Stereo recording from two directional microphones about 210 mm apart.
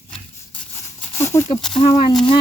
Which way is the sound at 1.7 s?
25° left (ahead or behind).